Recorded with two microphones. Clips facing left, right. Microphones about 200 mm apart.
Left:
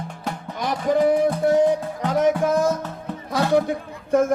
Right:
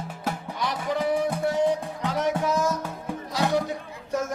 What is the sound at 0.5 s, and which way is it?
Music, 50° left (ahead or behind).